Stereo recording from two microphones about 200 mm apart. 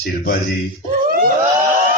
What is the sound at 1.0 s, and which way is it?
Screaming, 45° right (ahead or behind).